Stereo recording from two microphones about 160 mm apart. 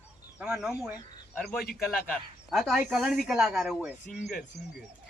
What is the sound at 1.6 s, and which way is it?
Speech, 70° left (ahead or behind).